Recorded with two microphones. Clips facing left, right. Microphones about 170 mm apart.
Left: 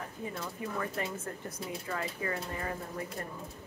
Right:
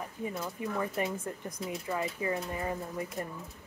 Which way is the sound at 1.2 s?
20° right (ahead or behind).